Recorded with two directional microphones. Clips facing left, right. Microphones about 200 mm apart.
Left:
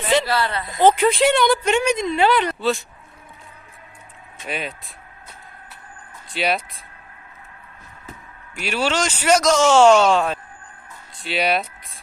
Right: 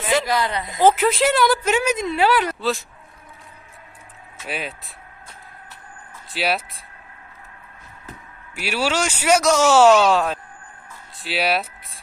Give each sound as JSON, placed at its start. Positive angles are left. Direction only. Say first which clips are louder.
{"t": 0.3, "sound": "speech", "louder": "even", "side_deg": -15}
{"t": 0.8, "sound": "speech", "louder": "left 1 dB", "side_deg": -5}
{"t": 4.4, "sound": "speech", "louder": "left 1 dB", "side_deg": -5}
{"t": 6.3, "sound": "speech", "louder": "left 1 dB", "side_deg": 0}
{"t": 8.5, "sound": "speech", "louder": "even", "side_deg": -10}